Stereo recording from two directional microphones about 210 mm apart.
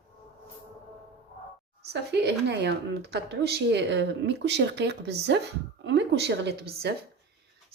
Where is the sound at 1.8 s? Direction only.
50° right (ahead or behind).